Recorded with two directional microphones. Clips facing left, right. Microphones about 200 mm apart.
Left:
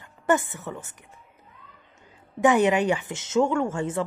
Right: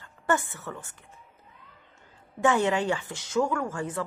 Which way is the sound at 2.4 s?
15° left (ahead or behind).